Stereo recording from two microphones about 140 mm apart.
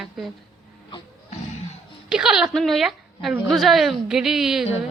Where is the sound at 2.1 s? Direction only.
5° right (ahead or behind).